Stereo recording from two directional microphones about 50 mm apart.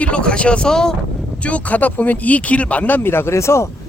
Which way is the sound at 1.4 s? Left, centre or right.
Left.